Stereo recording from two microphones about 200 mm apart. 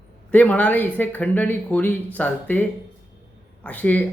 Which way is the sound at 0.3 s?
10° left (ahead or behind).